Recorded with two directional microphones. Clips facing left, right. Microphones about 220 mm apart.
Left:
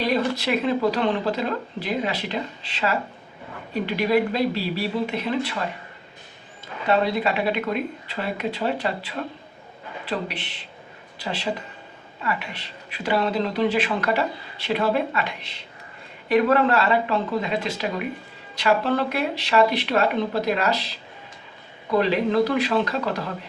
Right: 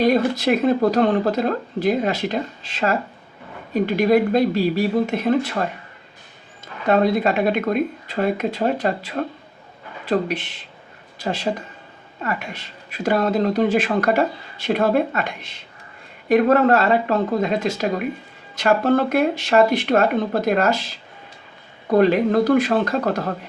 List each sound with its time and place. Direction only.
0.0 s speech: 45° right (ahead or behind)
6.8 s speech: 45° right (ahead or behind)